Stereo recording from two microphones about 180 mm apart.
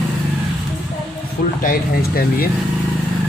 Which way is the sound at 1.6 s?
55° left (ahead or behind).